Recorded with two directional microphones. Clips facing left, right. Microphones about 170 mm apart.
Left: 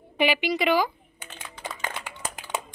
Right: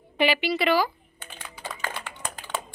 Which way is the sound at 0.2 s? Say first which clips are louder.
Even; 15° left (ahead or behind).